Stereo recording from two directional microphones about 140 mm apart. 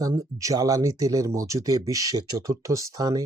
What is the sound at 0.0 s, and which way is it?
Speech, 25° right (ahead or behind).